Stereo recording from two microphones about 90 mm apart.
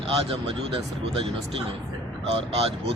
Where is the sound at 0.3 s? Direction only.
90° right.